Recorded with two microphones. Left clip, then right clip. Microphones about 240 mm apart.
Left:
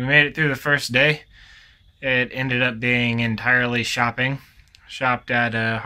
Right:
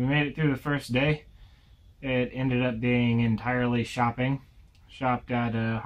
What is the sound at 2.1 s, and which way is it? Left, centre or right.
Speech, left.